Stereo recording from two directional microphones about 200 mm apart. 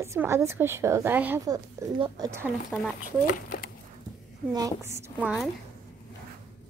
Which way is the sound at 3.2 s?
45° left (ahead or behind).